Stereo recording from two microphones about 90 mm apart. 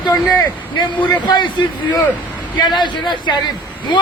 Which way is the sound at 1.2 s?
55° left (ahead or behind).